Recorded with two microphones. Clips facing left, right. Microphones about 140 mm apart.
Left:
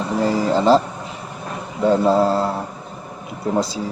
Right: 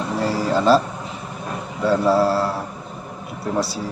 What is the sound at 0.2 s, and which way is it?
Speech, 15° left (ahead or behind).